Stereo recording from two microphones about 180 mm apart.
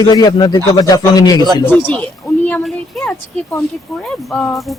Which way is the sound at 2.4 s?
5° left (ahead or behind).